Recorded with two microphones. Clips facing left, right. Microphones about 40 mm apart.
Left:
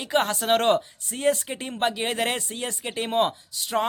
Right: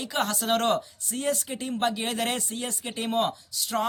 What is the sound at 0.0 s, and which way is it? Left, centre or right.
Speech, left.